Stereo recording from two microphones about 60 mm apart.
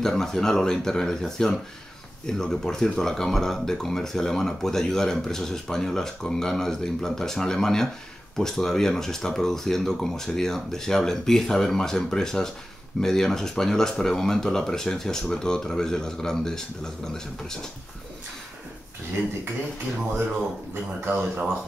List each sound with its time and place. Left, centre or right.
0.0 s speech: centre
20.7 s speech: right